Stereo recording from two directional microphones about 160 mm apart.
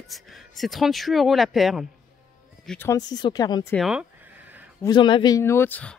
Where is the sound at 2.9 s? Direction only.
25° left (ahead or behind).